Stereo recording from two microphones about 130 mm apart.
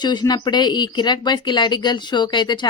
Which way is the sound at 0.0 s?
35° left (ahead or behind).